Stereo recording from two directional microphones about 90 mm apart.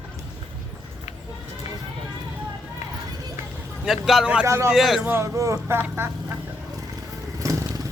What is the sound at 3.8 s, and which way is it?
Speech, 5° right (ahead or behind).